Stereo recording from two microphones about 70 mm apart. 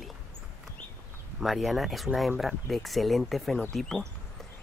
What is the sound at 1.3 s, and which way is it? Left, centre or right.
Speech, centre.